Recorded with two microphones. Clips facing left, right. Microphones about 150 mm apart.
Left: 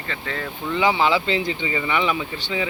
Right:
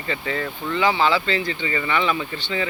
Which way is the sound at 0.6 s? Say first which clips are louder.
Left 1 dB; 15° left (ahead or behind).